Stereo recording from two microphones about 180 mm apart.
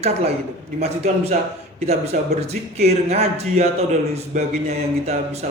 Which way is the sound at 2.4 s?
35° right (ahead or behind).